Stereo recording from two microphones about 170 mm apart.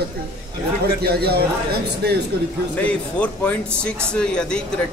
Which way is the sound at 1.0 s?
70° right (ahead or behind).